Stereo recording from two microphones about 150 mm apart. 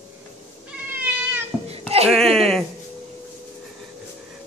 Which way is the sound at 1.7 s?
40° right (ahead or behind).